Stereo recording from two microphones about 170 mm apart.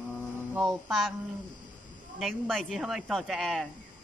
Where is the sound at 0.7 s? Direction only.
Centre (ahead or behind).